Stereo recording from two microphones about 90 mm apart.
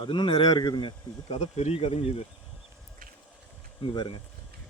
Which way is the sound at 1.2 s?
90° left.